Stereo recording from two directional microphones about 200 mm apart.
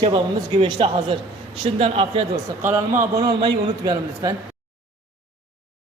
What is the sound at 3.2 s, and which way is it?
A man's voice, 20° right (ahead or behind).